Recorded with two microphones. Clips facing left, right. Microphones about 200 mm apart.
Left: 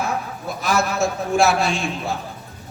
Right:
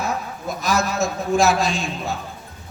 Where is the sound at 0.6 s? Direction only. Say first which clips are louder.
Left 1 dB; 35° right (ahead or behind).